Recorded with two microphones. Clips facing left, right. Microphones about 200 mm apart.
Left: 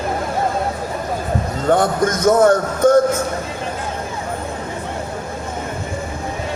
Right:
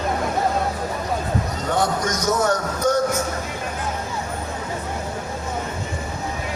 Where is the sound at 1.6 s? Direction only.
55° left (ahead or behind).